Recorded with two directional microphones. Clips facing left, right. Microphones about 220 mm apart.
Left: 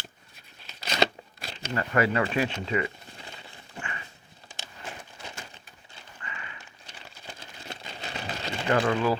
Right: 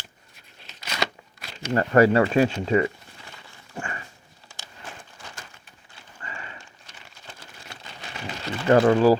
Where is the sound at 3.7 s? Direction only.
40° right (ahead or behind).